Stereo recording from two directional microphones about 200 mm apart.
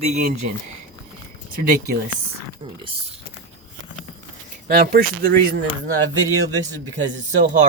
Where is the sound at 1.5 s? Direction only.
45° right (ahead or behind).